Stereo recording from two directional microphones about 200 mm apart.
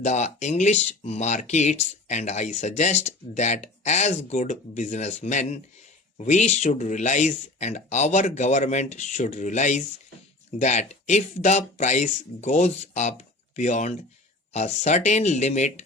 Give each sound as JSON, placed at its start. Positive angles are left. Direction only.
{"t": 0.0, "sound": "speech", "side_deg": 35}